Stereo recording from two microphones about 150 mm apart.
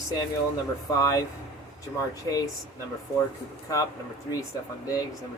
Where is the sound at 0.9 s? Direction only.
20° left (ahead or behind).